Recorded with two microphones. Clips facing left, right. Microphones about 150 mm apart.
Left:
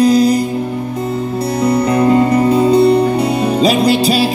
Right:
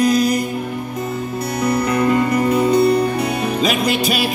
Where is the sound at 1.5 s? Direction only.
30° left (ahead or behind).